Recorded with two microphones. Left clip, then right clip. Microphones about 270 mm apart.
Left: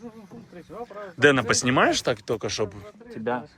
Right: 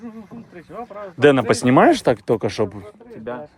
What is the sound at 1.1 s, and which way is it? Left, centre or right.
Speech, centre.